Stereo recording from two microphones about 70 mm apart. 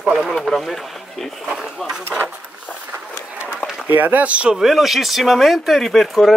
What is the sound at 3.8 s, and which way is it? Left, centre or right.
Speech, right.